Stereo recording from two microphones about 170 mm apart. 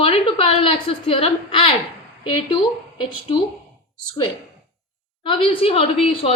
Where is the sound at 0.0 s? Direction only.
35° left (ahead or behind).